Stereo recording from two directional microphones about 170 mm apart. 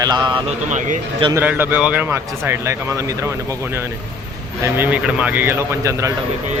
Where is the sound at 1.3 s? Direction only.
10° right (ahead or behind).